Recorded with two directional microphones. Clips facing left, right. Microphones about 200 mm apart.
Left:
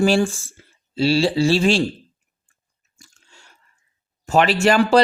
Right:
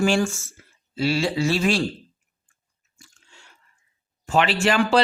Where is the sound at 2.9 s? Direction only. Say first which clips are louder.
Left 1 dB; 40° left (ahead or behind).